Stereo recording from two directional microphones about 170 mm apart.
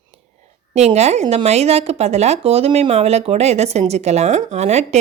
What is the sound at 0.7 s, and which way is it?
A woman's voice, 40° right (ahead or behind).